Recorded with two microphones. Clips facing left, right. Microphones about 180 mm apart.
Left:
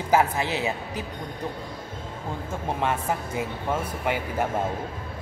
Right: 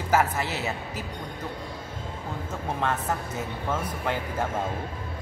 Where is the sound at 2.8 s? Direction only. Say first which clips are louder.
Left 1 dB; 10° left (ahead or behind).